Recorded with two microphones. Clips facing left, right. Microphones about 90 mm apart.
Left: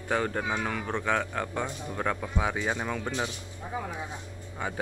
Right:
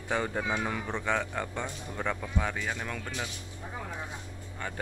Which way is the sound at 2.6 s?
20° left (ahead or behind).